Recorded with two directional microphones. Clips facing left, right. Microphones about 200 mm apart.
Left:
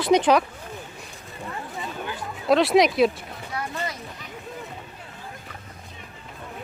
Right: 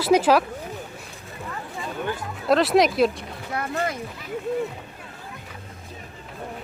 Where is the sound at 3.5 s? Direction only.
55° right (ahead or behind).